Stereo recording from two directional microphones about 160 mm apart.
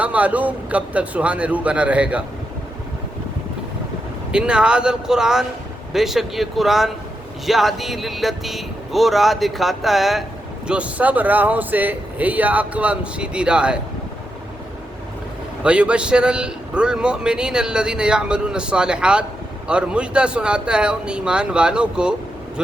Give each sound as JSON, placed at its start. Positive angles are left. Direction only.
{"t": 0.0, "sound": "speech", "side_deg": -10}
{"t": 4.3, "sound": "a man's voice", "side_deg": -5}
{"t": 15.6, "sound": "a man's voice", "side_deg": -5}